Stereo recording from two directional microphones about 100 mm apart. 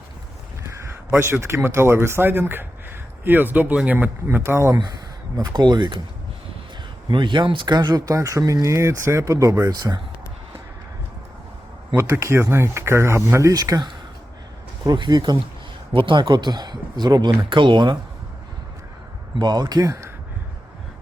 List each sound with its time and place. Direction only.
0.6 s speech: 25° right (ahead or behind)
5.4 s speech: 45° right (ahead or behind)
7.1 s speech: 50° right (ahead or behind)
11.9 s speech: 25° right (ahead or behind); by 16.2 s 55° right (ahead or behind)
16.2 s speech: 45° right (ahead or behind)
19.4 s speech: 40° right (ahead or behind)